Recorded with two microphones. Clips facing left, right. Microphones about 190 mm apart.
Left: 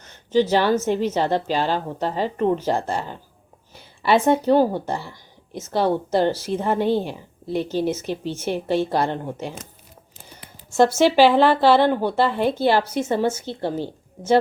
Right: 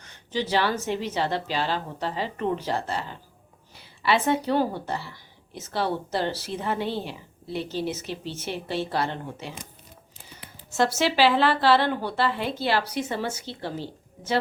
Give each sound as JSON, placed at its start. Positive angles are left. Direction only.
{"t": 0.3, "sound": "a woman's voice", "side_deg": 45}
{"t": 10.8, "sound": "a woman's voice", "side_deg": 50}
{"t": 13.1, "sound": "speech", "side_deg": 25}
{"t": 13.4, "sound": "a woman's voice", "side_deg": 50}